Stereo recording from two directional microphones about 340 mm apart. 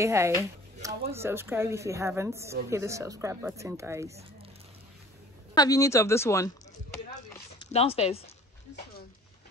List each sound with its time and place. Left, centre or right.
0.0 s speech: centre
5.6 s speech: centre
7.3 s zipper: centre